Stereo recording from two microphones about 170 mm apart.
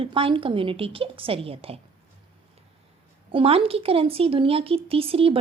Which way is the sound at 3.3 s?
35° right (ahead or behind).